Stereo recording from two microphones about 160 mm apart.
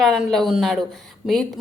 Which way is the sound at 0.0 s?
Centre (ahead or behind).